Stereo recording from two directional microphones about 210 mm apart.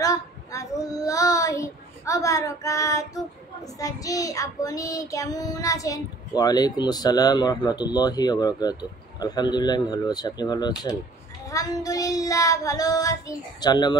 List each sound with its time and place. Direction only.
0.0 s child singing: 15° left (ahead or behind)
9.2 s speech: 20° left (ahead or behind)
11.5 s child singing: 15° left (ahead or behind)